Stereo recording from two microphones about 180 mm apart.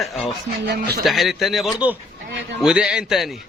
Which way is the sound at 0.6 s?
65° right (ahead or behind).